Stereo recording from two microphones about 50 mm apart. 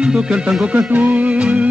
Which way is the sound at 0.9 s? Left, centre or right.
Right.